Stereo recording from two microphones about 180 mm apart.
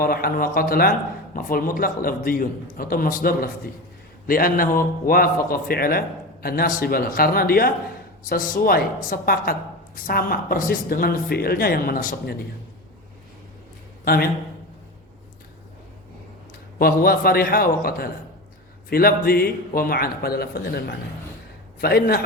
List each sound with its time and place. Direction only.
0.0 s a man's voice: 55° left (ahead or behind)
14.0 s a man's voice: 55° left (ahead or behind)
16.7 s a man's voice: 55° left (ahead or behind)